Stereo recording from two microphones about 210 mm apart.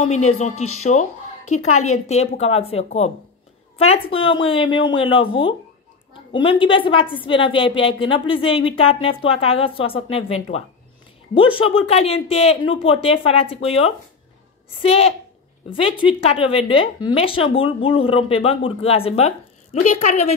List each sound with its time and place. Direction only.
1.4 s a woman's voice: 90° left
2.0 s a woman's voice: 30° left (ahead or behind)